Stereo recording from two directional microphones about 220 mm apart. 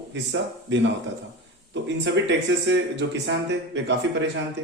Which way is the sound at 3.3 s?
55° right (ahead or behind).